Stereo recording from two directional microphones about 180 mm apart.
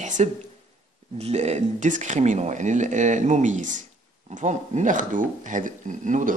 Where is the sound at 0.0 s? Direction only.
40° right (ahead or behind).